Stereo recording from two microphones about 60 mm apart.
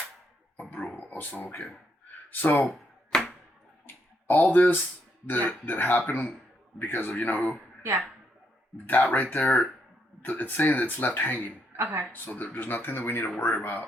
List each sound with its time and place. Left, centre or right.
0.9 s speech: left
3.1 s arrow: centre
3.8 s a sound: left
5.2 s speech: left
7.8 s speech: right
8.9 s speech: left
11.8 s a woman's voice: right
12.1 s speech: left